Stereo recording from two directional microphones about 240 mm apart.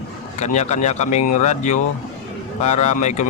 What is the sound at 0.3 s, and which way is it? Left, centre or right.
Speech, left.